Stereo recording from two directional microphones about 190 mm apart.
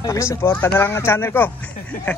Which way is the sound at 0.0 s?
15° left (ahead or behind).